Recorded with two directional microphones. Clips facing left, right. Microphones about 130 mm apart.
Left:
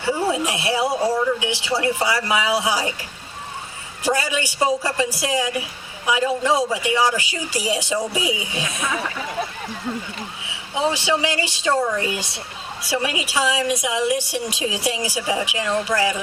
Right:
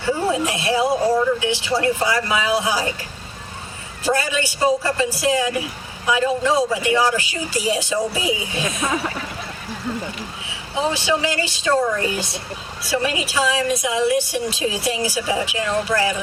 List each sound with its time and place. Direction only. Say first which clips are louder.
0.0 s speech: right 1 dB; 15° left (ahead or behind)
4.0 s speech: right 1 dB; 15° left (ahead or behind)
8.6 s speech: right 4 dB; 35° right (ahead or behind)
10.9 s speech: right 1 dB; 15° left (ahead or behind)